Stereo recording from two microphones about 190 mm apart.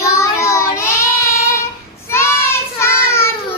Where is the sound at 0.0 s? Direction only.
15° left (ahead or behind).